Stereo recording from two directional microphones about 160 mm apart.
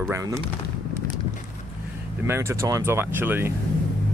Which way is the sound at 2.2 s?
15° right (ahead or behind).